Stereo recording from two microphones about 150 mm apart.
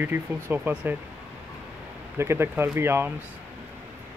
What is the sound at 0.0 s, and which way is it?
Speech, 15° right (ahead or behind).